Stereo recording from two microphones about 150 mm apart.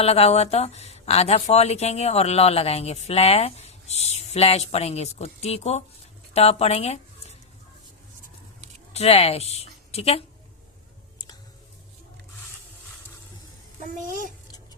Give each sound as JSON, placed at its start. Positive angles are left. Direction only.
{"t": 0.0, "sound": "speech", "side_deg": 40}
{"t": 8.9, "sound": "a woman's voice", "side_deg": 45}
{"t": 14.0, "sound": "a child's voice", "side_deg": -60}